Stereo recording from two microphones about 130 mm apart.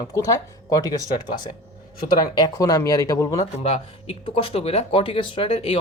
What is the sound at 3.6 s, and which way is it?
A woman's voice, 50° left (ahead or behind).